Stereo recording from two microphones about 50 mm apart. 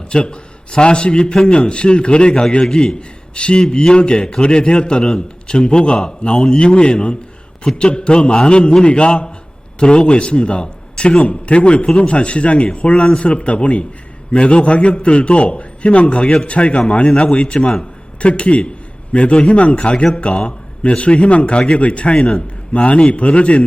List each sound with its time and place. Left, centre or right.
0.1 s a man's voice: centre